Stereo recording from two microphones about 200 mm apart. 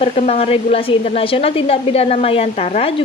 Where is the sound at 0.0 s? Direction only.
30° left (ahead or behind).